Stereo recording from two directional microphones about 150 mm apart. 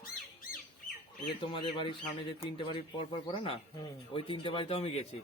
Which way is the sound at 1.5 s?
35° left (ahead or behind).